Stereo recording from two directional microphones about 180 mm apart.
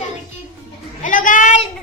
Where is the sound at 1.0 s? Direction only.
45° left (ahead or behind).